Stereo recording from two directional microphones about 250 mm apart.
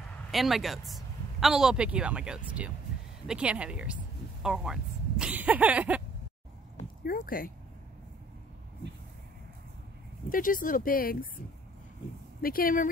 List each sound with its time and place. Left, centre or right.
0.3 s speech: centre
7.1 s speech: left
10.3 s speech: left